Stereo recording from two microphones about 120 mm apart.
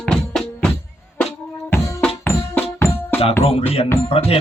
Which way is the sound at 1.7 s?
20° left (ahead or behind).